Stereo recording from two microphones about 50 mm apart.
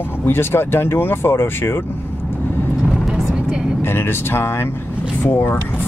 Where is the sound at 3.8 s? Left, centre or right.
Left.